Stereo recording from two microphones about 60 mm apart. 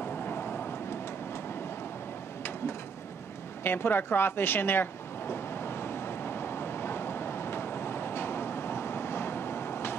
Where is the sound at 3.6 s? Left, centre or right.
Left.